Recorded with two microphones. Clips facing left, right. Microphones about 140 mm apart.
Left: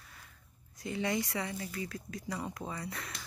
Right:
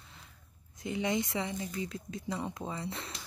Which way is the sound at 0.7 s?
20° right (ahead or behind).